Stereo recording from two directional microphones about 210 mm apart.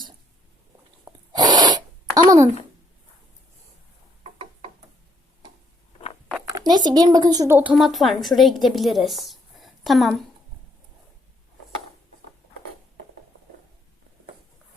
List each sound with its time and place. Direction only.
1.0 s gasp: 20° right (ahead or behind)
6.3 s speech: 15° right (ahead or behind); by 10.2 s centre (ahead or behind)